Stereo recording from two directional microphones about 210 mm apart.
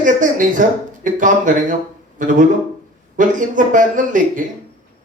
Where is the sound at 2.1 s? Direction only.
40° right (ahead or behind).